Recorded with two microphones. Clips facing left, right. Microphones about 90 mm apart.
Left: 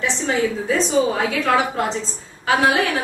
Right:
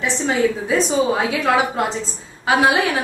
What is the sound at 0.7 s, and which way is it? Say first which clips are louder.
A woman's voice: right 1 dB; 15° right (ahead or behind).